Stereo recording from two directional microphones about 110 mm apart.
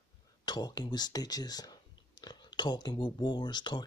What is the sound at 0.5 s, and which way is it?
Speech, 40° left (ahead or behind).